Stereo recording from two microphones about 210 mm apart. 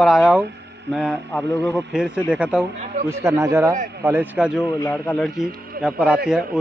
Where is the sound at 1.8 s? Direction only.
5° right (ahead or behind).